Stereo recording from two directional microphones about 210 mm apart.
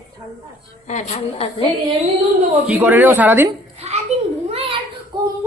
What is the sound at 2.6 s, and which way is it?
Speech, 10° right (ahead or behind).